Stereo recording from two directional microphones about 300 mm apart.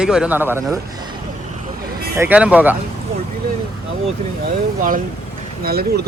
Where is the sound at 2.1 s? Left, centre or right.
Centre.